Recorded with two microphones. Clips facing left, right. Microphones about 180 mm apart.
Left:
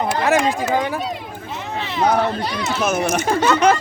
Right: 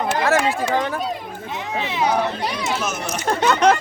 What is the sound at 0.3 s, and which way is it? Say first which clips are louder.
Speech: left 2 dB; 10° left (ahead or behind).